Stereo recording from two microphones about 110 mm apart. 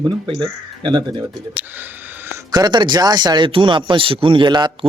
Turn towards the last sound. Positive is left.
turn(degrees=-45)  # may be behind; listen again after turning